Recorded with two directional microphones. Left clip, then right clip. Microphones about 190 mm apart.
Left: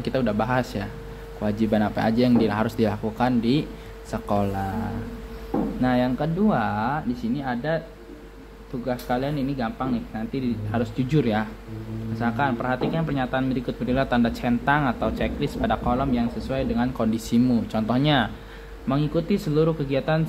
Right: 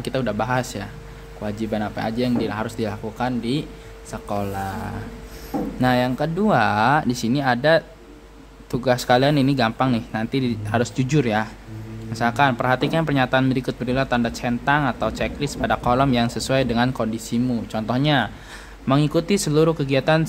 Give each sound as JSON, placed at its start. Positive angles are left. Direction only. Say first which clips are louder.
{"t": 0.0, "sound": "speech", "louder": "right 1 dB", "side_deg": -5}
{"t": 5.8, "sound": "speech", "louder": "right 5 dB", "side_deg": -20}
{"t": 6.5, "sound": "speech", "louder": "right 7 dB", "side_deg": -30}
{"t": 8.8, "sound": "a man's voice", "louder": "right 9 dB", "side_deg": -45}
{"t": 11.1, "sound": "speech", "louder": "right 1 dB", "side_deg": -20}
{"t": 12.2, "sound": "speech", "louder": "right 6 dB", "side_deg": -30}
{"t": 13.9, "sound": "speech", "louder": "right 1 dB", "side_deg": -10}
{"t": 15.9, "sound": "speech", "louder": "right 6 dB", "side_deg": -35}
{"t": 16.9, "sound": "speech", "louder": "even", "side_deg": -10}
{"t": 18.9, "sound": "speech", "louder": "right 5 dB", "side_deg": -30}